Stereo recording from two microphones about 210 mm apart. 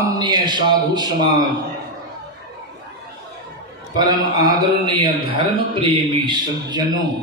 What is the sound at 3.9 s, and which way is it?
Speech, 15° right (ahead or behind).